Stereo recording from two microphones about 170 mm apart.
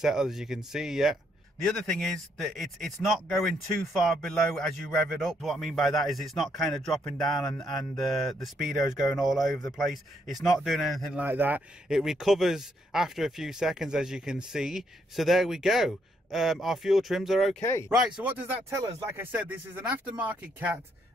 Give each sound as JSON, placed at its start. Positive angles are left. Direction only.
{"t": 0.0, "sound": "speech", "side_deg": 0}
{"t": 18.6, "sound": "speech", "side_deg": -15}